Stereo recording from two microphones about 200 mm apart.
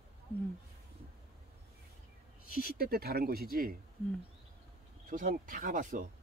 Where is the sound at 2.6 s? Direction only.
50° right (ahead or behind).